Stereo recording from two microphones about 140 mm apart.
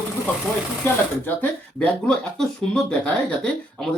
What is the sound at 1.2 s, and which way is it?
Speech, 10° left (ahead or behind).